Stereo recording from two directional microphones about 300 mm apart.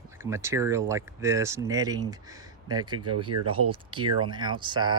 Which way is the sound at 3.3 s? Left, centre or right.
Right.